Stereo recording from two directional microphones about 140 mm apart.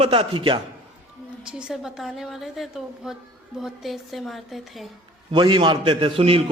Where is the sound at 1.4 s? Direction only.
5° right (ahead or behind).